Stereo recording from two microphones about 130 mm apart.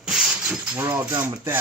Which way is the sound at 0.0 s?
5° right (ahead or behind).